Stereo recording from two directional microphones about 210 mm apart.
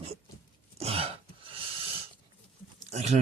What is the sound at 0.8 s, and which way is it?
Throat clearing, 30° right (ahead or behind).